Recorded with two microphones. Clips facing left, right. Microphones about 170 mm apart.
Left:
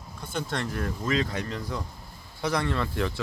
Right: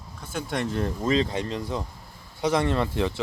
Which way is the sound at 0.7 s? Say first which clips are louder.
Right 5 dB; 25° right (ahead or behind).